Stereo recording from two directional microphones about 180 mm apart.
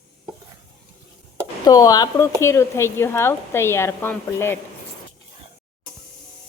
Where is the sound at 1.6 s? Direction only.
20° left (ahead or behind).